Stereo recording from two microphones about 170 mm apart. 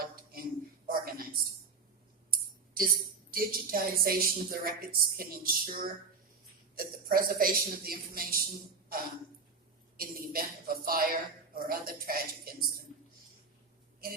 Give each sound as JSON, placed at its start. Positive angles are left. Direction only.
{"t": 0.0, "sound": "a sound", "side_deg": -60}
{"t": 3.3, "sound": "a woman's voice", "side_deg": -60}
{"t": 10.0, "sound": "a woman's voice", "side_deg": -60}